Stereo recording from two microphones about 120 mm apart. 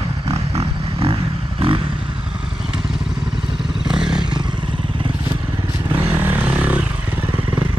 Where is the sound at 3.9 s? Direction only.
5° right (ahead or behind).